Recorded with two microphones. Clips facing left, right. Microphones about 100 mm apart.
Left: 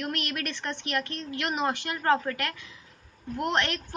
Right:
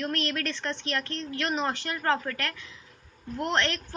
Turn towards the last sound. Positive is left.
turn(degrees=15)  # may be behind; listen again after turning